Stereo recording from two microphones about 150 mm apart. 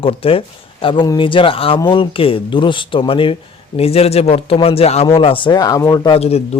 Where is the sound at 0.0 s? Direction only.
40° left (ahead or behind).